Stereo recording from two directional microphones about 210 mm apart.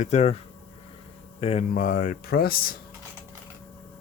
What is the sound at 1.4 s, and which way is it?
Speech, 30° left (ahead or behind).